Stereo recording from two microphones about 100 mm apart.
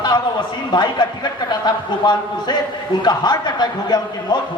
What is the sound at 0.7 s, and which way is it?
A man's voice, 45° left (ahead or behind).